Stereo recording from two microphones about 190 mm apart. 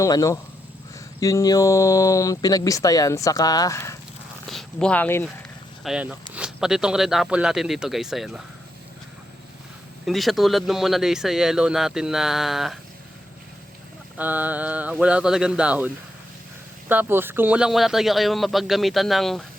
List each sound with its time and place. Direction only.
0.0 s speech: 15° left (ahead or behind)
4.4 s speech: 5° left (ahead or behind)
5.8 s speech: 5° right (ahead or behind)
10.1 s speech: centre (ahead or behind)
14.2 s speech: 10° right (ahead or behind)
16.9 s speech: 10° right (ahead or behind)